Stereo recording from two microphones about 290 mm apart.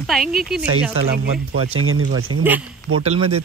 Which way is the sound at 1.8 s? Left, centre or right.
Right.